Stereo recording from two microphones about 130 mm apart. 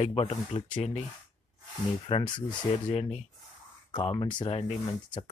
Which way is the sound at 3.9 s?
40° left (ahead or behind).